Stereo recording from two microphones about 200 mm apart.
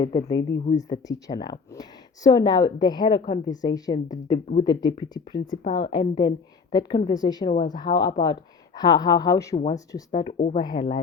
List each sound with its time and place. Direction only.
0.0 s speech: 20° left (ahead or behind)
10.3 s speech: 40° left (ahead or behind)
10.6 s speech: 20° left (ahead or behind)